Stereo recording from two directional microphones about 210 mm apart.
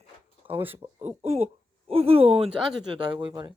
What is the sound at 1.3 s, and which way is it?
Speech, 30° right (ahead or behind).